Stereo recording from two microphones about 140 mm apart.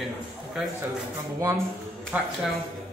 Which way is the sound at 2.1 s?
10° right (ahead or behind).